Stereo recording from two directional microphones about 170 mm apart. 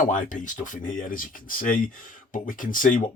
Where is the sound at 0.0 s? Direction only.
50° left (ahead or behind).